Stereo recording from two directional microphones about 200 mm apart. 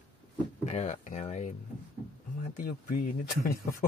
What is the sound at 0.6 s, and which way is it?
Speech, 35° left (ahead or behind).